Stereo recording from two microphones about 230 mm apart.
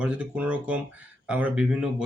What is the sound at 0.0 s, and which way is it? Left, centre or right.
Speech, centre.